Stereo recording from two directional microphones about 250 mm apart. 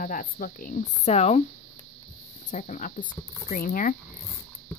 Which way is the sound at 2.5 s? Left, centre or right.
Left.